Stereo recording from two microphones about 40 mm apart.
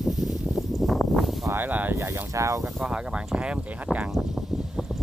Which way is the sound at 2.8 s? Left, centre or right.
Right.